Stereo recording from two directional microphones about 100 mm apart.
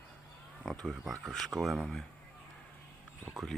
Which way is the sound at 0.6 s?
Centre (ahead or behind).